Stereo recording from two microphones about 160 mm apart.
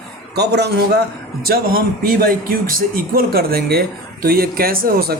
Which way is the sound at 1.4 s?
65° right (ahead or behind).